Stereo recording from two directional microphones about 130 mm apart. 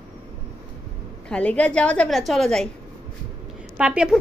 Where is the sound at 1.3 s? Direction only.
10° left (ahead or behind).